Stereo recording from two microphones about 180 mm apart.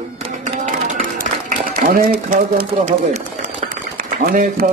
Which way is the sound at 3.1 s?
45° right (ahead or behind).